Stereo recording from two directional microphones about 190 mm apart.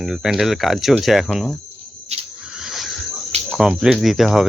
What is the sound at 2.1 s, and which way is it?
Snake, 35° right (ahead or behind).